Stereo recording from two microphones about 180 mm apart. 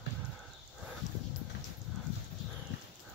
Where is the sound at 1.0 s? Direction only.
40° left (ahead or behind).